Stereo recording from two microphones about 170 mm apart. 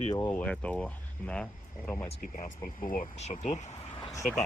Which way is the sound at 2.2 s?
50° left (ahead or behind).